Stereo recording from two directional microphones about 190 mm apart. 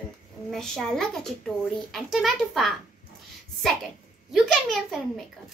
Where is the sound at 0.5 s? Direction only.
Centre (ahead or behind).